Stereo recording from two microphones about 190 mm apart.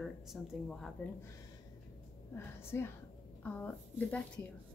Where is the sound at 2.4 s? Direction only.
15° left (ahead or behind).